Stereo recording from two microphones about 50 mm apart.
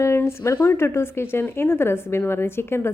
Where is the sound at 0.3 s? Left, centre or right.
Left.